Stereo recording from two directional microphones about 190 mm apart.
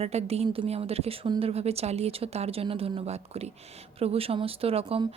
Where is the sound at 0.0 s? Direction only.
35° right (ahead or behind).